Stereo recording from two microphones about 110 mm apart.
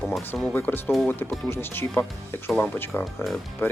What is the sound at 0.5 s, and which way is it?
Speech, 15° left (ahead or behind).